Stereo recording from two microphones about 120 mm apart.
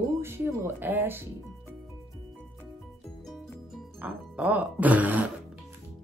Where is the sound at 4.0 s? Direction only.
15° right (ahead or behind).